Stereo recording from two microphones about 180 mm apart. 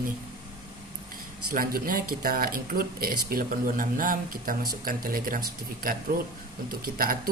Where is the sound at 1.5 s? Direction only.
55° right (ahead or behind).